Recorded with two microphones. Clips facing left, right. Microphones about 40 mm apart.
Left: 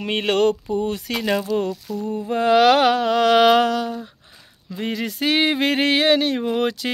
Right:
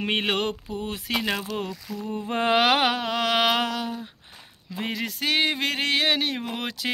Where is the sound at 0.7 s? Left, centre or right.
Centre.